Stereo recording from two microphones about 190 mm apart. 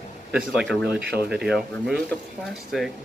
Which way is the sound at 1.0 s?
55° right (ahead or behind).